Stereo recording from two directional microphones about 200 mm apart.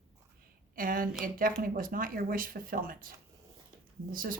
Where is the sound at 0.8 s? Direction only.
45° right (ahead or behind).